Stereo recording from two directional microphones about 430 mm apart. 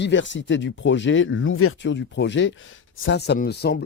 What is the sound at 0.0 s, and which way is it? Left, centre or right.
Speech, left.